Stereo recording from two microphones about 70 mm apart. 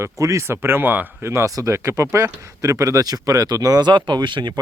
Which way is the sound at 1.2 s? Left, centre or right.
Right.